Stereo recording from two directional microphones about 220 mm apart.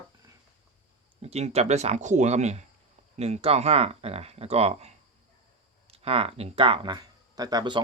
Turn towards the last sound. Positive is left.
turn(degrees=-20)  # may be behind; listen again after turning